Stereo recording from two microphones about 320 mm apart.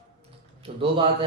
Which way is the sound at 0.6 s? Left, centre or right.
Centre.